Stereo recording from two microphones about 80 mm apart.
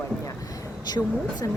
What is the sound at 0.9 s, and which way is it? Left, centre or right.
Speech, left.